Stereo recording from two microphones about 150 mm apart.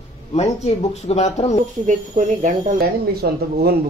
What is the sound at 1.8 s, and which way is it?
Speech, 55° right (ahead or behind).